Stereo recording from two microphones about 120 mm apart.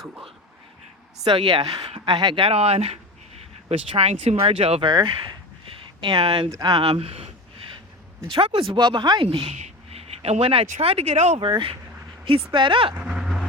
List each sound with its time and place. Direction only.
1.2 s speech: 45° right (ahead or behind)
4.9 s speech: 35° right (ahead or behind)
6.5 s speech: 35° right (ahead or behind)
6.8 s speech: 55° right (ahead or behind)
8.3 s speech: 50° right (ahead or behind)
9.2 s speech: 50° right (ahead or behind)
9.6 s a sound: 65° right (ahead or behind)
10.7 s speech: 55° right (ahead or behind)
11.3 s speech: 45° right (ahead or behind)
12.9 s vehicle: 10° right (ahead or behind)